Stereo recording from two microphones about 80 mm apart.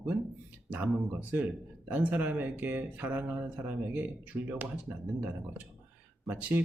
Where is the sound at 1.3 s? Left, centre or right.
Right.